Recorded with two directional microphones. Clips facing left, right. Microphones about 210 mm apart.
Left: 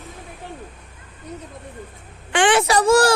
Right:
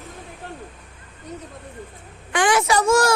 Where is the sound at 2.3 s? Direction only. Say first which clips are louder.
Left 2 dB; 30° left (ahead or behind).